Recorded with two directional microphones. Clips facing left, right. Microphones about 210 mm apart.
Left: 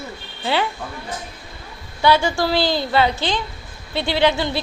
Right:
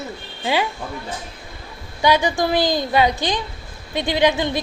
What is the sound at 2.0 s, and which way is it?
Speech, 15° right (ahead or behind).